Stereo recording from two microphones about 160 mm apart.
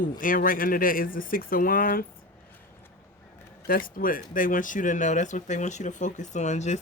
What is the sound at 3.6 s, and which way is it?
Speech, 65° left (ahead or behind).